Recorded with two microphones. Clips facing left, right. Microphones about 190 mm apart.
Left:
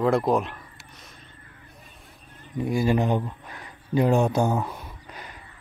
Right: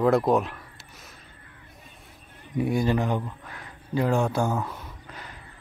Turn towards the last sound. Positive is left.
turn(degrees=15)  # may be behind; listen again after turning